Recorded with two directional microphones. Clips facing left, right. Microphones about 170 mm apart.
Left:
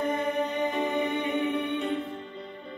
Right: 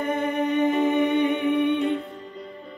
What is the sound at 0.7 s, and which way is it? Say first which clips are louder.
Humming: right 7 dB; centre (ahead or behind).